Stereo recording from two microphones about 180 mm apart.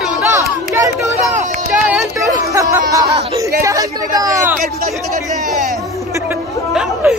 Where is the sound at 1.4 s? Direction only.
45° right (ahead or behind).